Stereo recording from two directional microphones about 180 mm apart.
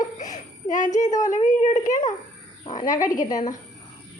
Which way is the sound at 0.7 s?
45° left (ahead or behind).